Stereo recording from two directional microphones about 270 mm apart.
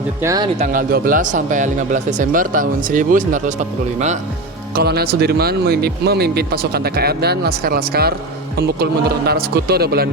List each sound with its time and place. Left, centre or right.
0.2 s speech: centre
0.6 s speech: right
4.7 s speech: right